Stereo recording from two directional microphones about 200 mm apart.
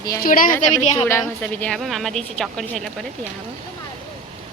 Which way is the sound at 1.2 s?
5° left (ahead or behind).